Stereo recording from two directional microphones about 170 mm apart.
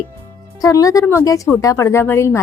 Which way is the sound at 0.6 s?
20° left (ahead or behind).